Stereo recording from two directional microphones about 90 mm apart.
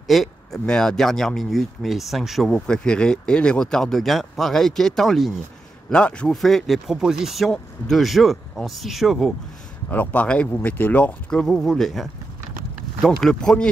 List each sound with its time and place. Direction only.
0.0 s speech: centre (ahead or behind)
2.5 s speech: 10° left (ahead or behind)
6.3 s speech: centre (ahead or behind)
9.8 s speech: 15° left (ahead or behind)
13.2 s speech: 5° left (ahead or behind)